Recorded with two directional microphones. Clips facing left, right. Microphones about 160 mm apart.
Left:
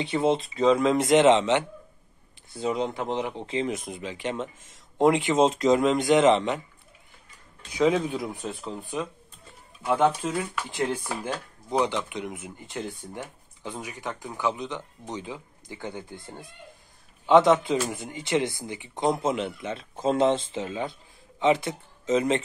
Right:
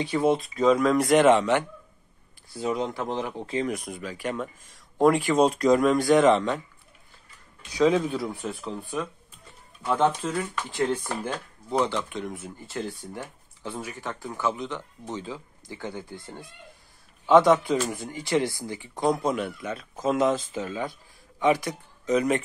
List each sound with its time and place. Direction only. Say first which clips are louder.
0.0 s speech: right 1 dB; 25° left (ahead or behind)
7.7 s speech: right 1 dB; 20° left (ahead or behind)